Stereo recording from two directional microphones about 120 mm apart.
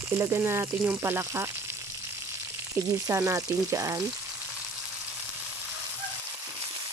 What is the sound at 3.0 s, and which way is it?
Frying, 25° right (ahead or behind).